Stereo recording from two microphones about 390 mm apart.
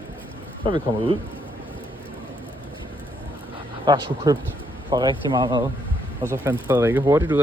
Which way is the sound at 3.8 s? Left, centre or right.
Centre.